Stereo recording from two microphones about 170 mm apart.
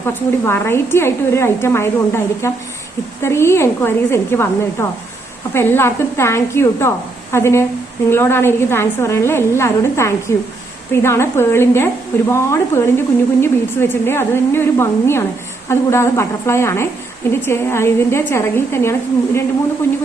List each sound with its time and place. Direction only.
0.0 s a woman's voice: 15° left (ahead or behind)